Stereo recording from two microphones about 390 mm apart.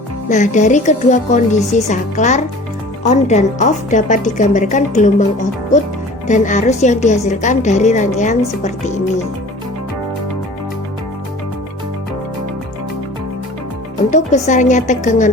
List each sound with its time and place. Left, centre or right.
0.3 s a woman's voice: centre
6.2 s a woman's voice: centre
14.1 s a woman's voice: centre